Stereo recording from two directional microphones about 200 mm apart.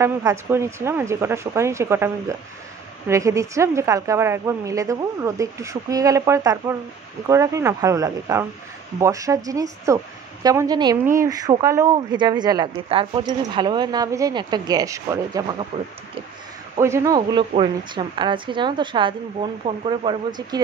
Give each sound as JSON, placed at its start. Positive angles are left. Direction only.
{"t": 0.0, "sound": "a woman's voice", "side_deg": -15}
{"t": 16.7, "sound": "a woman's voice", "side_deg": -15}